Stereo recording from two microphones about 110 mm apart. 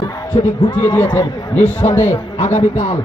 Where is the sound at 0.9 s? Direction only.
15° left (ahead or behind).